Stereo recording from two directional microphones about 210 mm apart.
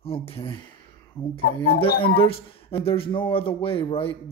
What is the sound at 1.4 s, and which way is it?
Speech, 50° left (ahead or behind).